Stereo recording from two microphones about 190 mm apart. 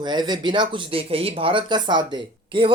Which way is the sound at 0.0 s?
20° right (ahead or behind).